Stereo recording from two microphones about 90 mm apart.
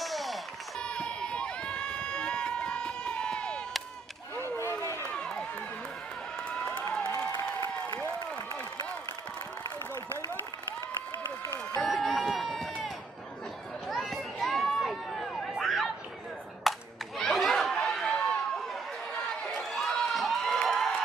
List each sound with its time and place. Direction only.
0.0 s run: centre (ahead or behind)
4.4 s a sound: 25° left (ahead or behind)
5.0 s run: 10° left (ahead or behind)
11.8 s run: centre (ahead or behind)
13.8 s a sound: centre (ahead or behind)
17.2 s chatter: centre (ahead or behind)
19.1 s crowd: 5° left (ahead or behind)